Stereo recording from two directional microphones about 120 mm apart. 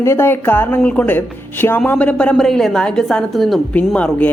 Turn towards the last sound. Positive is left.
turn(degrees=10)  # may be behind; listen again after turning